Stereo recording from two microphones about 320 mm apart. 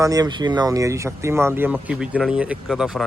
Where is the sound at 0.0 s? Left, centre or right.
Centre.